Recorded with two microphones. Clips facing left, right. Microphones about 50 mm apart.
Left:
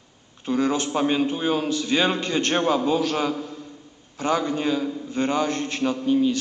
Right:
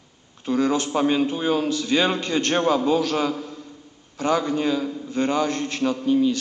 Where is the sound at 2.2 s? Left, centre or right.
Left.